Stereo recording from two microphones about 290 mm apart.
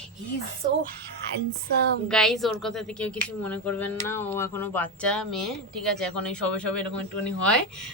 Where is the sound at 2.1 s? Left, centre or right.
Centre.